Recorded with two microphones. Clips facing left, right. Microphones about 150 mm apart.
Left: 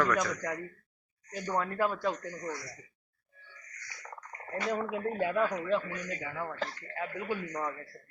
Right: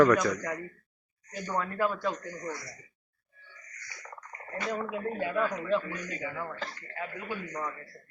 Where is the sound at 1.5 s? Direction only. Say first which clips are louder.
Right 1 dB; 15° left (ahead or behind).